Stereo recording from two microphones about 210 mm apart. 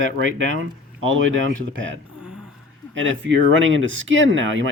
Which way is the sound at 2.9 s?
65° right (ahead or behind).